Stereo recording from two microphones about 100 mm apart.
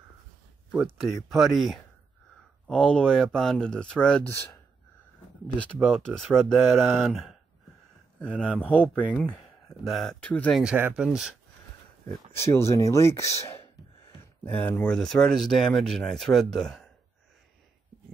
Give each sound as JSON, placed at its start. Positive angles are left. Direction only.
{"t": 1.0, "sound": "speech", "side_deg": 0}
{"t": 5.8, "sound": "speech", "side_deg": 5}
{"t": 9.8, "sound": "speech", "side_deg": 0}
{"t": 10.2, "sound": "speech", "side_deg": 15}
{"t": 10.5, "sound": "speech", "side_deg": -5}
{"t": 12.4, "sound": "speech", "side_deg": 25}
{"t": 14.4, "sound": "speech", "side_deg": 15}